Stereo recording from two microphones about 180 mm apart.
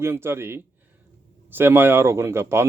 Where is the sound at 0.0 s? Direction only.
15° right (ahead or behind).